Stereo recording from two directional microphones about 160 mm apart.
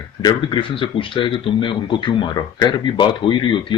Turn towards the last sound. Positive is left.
turn(degrees=30)  # may be behind; listen again after turning